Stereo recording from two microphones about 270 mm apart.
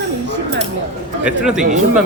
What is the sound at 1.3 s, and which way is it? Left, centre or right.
Speech, centre.